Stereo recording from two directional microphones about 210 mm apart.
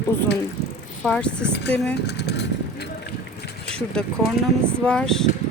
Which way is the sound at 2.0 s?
55° left (ahead or behind).